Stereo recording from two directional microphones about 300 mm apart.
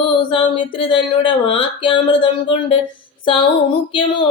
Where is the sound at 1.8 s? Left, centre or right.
Centre.